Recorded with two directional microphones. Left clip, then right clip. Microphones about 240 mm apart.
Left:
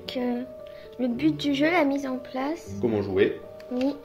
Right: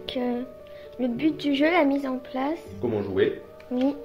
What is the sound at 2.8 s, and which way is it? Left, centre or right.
Speech, left.